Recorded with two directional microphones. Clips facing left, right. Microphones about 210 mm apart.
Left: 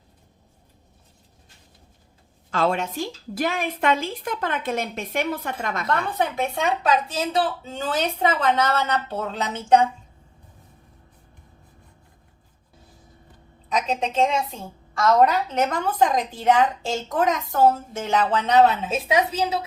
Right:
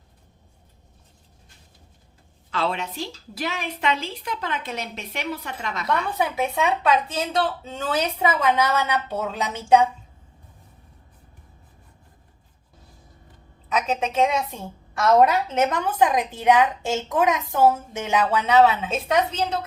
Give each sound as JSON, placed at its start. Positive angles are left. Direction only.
{"t": 2.5, "sound": "a woman's voice", "side_deg": 45}
{"t": 6.1, "sound": "a woman's voice", "side_deg": -5}
{"t": 13.7, "sound": "a woman's voice", "side_deg": -5}
{"t": 15.3, "sound": "a woman's voice", "side_deg": -20}